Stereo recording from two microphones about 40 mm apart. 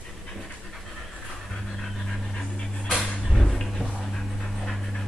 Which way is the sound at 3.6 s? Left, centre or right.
Centre.